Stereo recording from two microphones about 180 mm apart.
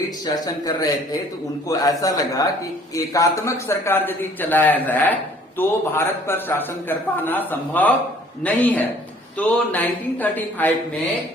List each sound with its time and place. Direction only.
0.3 s a man's voice: 20° left (ahead or behind)